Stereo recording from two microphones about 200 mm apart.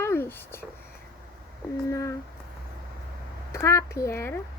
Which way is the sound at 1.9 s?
15° left (ahead or behind).